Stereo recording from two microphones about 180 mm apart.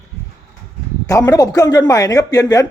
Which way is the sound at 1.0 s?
20° left (ahead or behind).